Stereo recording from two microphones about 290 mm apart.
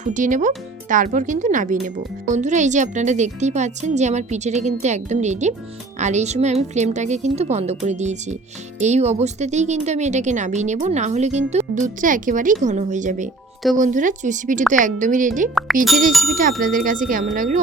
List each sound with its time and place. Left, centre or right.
0.0 s a woman's voice: right
15.5 s speech: centre
16.4 s a woman's voice: right